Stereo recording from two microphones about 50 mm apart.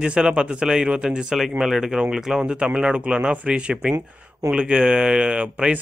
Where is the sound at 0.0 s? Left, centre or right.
Centre.